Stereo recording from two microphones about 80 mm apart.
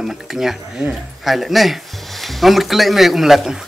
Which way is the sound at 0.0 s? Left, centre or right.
Centre.